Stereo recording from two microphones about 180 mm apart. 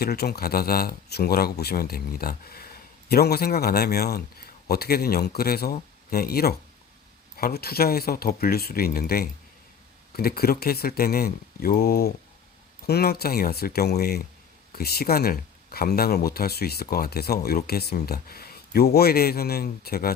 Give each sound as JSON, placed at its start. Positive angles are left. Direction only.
{"t": 0.0, "sound": "speech", "side_deg": 60}